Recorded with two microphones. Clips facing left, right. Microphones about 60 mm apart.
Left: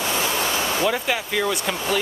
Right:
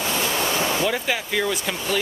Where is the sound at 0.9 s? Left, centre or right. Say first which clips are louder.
Left 1 dB; centre.